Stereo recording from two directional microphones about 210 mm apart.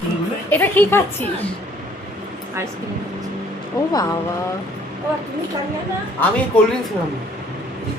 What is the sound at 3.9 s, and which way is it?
Speech, 20° left (ahead or behind).